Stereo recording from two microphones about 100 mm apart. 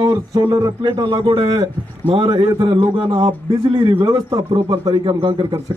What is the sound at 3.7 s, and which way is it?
Speech, 45° right (ahead or behind).